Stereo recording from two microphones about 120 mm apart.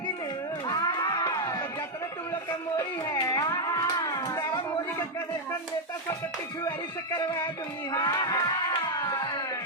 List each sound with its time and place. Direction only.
0.7 s music: 35° left (ahead or behind)
2.7 s music: 30° left (ahead or behind)
7.2 s music: 35° left (ahead or behind)